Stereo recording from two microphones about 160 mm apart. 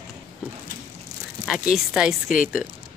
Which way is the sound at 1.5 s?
5° right (ahead or behind).